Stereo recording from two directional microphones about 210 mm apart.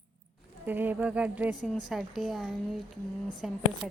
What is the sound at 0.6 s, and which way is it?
A woman's voice, 10° right (ahead or behind).